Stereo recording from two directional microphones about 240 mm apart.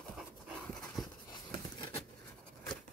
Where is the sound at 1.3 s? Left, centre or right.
Centre.